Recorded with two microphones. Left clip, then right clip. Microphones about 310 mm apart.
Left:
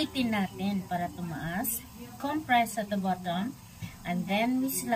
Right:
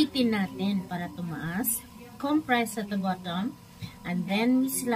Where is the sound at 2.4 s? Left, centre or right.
Centre.